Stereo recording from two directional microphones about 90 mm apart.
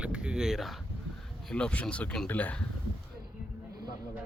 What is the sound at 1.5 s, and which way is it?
Speech, 10° left (ahead or behind).